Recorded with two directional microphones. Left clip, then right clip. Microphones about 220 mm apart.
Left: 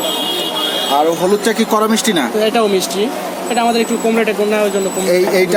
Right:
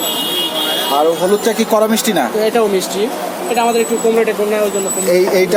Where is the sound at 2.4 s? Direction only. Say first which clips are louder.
Left 2 dB; 30° left (ahead or behind).